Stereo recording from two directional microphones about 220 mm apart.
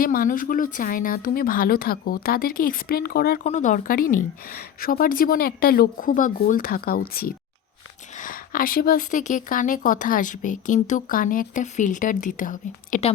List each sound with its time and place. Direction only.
0.0 s a woman's voice: 40° left (ahead or behind)